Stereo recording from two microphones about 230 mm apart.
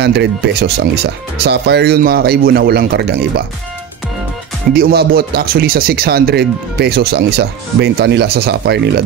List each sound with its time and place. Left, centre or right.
0.0 s speech: right
4.7 s speech: right